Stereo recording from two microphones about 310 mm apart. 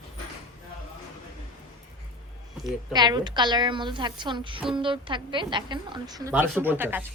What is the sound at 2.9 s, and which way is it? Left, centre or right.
A woman's voice, centre.